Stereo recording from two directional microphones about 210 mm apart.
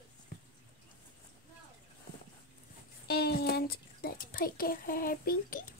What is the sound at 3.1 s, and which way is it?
A child's voice, 50° left (ahead or behind).